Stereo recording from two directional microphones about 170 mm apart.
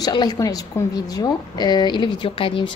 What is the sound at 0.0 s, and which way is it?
A woman's voice, 25° left (ahead or behind).